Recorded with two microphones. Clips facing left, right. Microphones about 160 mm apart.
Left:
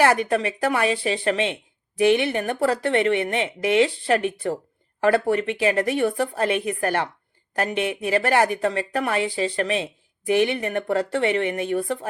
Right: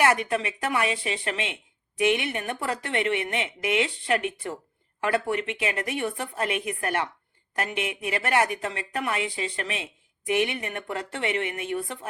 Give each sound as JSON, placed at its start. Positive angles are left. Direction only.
{"t": 0.0, "sound": "speech", "side_deg": 35}